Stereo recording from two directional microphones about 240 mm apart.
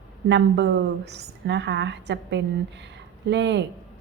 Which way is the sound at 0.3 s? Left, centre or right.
Right.